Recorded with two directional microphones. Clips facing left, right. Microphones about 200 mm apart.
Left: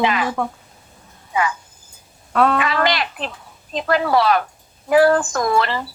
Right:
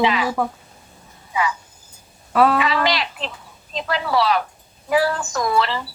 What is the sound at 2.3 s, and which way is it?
Speech, 5° right (ahead or behind).